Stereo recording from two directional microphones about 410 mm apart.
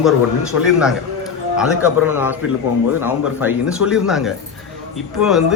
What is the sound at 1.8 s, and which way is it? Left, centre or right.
Speech, left.